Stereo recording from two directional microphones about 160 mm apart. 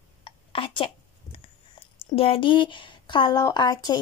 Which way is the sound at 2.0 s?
35° left (ahead or behind).